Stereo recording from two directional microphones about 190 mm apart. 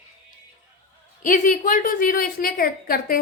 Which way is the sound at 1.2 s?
45° left (ahead or behind).